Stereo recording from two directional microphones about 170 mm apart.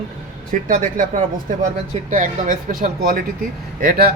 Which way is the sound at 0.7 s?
50° right (ahead or behind).